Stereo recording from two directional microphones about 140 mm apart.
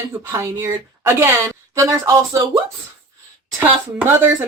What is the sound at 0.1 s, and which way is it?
A woman's voice, 20° right (ahead or behind).